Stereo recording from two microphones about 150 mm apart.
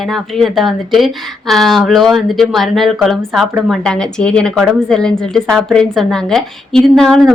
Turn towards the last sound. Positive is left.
turn(degrees=5)  # may be behind; listen again after turning